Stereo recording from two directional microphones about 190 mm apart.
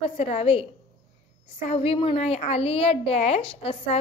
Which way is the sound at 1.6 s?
30° left (ahead or behind).